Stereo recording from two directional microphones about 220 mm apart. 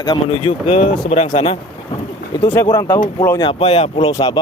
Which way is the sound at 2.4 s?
20° left (ahead or behind).